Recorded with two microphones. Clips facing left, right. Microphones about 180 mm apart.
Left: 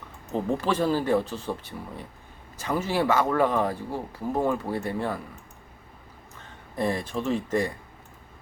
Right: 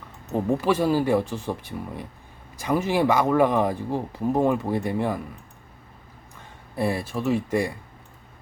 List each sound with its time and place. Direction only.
0.3 s speech: 10° right (ahead or behind)
6.7 s speech: 10° right (ahead or behind)